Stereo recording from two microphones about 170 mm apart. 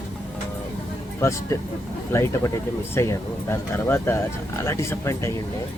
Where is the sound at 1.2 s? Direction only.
15° left (ahead or behind).